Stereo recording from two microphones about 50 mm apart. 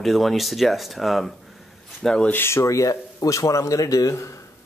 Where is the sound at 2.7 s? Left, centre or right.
Left.